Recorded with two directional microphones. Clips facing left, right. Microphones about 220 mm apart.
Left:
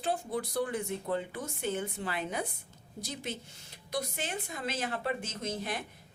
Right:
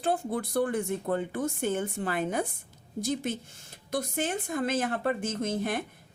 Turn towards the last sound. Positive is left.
turn(degrees=-50)  # may be behind; listen again after turning